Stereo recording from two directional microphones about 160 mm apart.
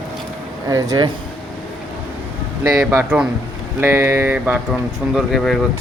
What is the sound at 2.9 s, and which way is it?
Speech, 10° right (ahead or behind).